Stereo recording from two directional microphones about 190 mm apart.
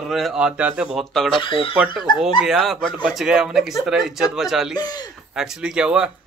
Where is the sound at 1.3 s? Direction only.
25° left (ahead or behind).